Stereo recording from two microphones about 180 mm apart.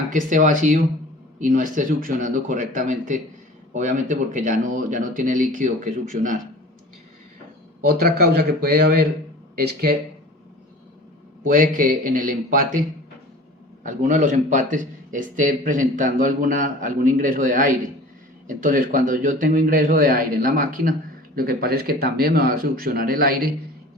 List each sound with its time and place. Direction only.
0.1 s speech: 45° right (ahead or behind)
7.9 s a man's voice: 60° right (ahead or behind)
11.4 s speech: 50° right (ahead or behind)
13.8 s a man's voice: 45° right (ahead or behind)